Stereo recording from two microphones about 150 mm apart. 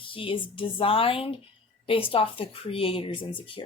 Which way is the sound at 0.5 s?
35° left (ahead or behind).